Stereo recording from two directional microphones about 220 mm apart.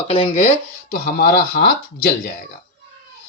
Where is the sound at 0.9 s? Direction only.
40° left (ahead or behind).